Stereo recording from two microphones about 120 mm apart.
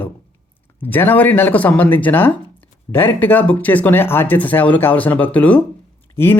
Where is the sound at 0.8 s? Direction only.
15° left (ahead or behind).